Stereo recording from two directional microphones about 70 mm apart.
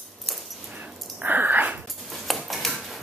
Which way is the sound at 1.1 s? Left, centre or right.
Right.